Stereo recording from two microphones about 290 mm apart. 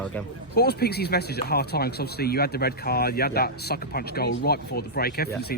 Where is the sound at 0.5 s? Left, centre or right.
Left.